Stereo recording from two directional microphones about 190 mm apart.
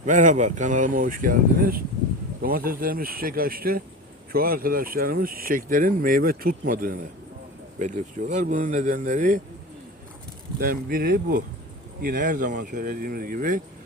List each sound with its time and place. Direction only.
0.0 s speech: 40° right (ahead or behind)
10.6 s speech: 50° right (ahead or behind)